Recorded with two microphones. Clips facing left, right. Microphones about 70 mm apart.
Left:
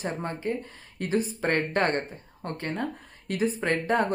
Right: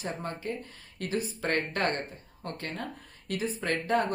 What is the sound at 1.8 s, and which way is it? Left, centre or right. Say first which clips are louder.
A woman's voice: left 4 dB; left.